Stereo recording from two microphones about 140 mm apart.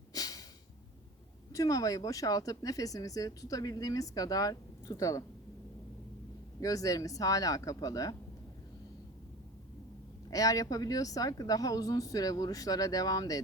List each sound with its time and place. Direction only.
0.1 s snort: 25° left (ahead or behind)
1.5 s speech: 25° left (ahead or behind)
6.6 s speech: 25° left (ahead or behind)
10.2 s speech: 25° left (ahead or behind)